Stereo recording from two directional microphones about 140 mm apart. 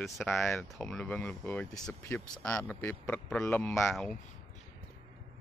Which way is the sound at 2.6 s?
15° left (ahead or behind).